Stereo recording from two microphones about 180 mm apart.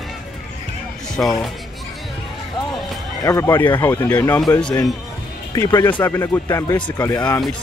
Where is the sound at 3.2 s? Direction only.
15° left (ahead or behind).